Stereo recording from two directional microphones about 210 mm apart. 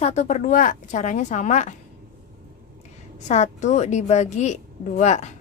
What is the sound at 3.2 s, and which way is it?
Speech, 35° left (ahead or behind).